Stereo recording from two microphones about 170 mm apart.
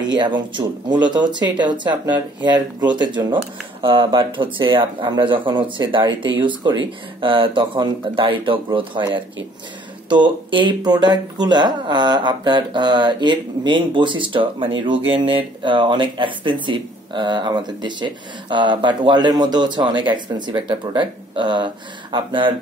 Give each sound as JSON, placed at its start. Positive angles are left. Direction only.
{"t": 0.0, "sound": "speech", "side_deg": -25}